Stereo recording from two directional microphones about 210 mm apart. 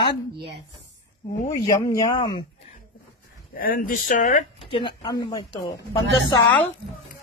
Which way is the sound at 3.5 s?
40° left (ahead or behind).